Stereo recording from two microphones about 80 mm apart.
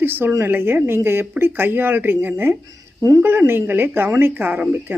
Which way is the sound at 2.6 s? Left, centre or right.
Right.